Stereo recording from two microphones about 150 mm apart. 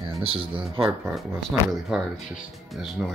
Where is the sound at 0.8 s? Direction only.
5° right (ahead or behind).